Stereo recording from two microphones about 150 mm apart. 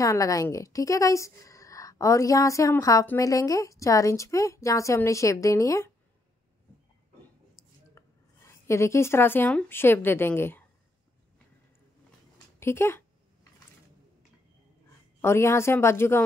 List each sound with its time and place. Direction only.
0.0 s a woman's voice: 20° left (ahead or behind)
7.9 s speech: 20° left (ahead or behind)
12.5 s a sound: 15° left (ahead or behind)
15.2 s speech: 15° left (ahead or behind)